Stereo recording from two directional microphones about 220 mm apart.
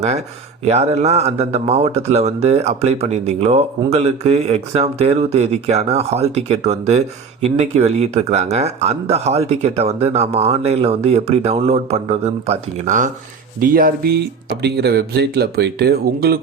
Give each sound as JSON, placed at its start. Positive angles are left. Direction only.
{"t": 0.6, "sound": "speech", "side_deg": -30}